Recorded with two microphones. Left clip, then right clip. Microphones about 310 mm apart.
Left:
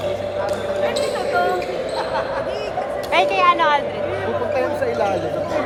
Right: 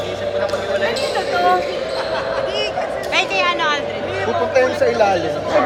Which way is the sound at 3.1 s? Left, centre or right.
Centre.